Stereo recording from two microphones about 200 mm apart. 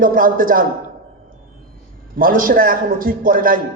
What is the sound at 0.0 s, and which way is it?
Speech, 45° right (ahead or behind).